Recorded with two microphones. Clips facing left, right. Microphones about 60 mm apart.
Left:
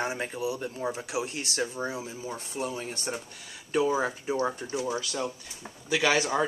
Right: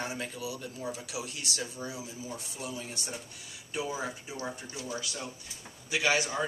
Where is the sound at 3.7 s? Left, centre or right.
Left.